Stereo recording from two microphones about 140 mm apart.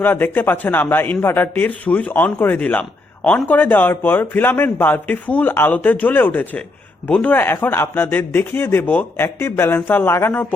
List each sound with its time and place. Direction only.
0.0 s speech: 15° left (ahead or behind)